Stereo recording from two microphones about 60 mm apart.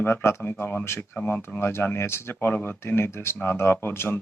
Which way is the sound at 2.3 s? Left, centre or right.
Left.